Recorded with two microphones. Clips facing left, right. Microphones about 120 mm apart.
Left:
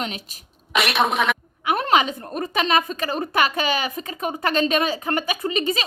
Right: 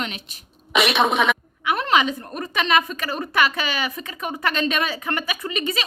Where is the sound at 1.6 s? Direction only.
40° left (ahead or behind).